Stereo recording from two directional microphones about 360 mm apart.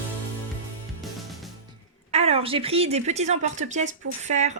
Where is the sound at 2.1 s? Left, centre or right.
Centre.